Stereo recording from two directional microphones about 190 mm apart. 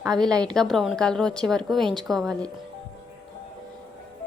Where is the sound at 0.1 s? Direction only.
20° right (ahead or behind).